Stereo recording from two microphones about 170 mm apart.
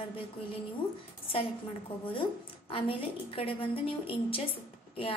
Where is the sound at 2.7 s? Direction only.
35° left (ahead or behind).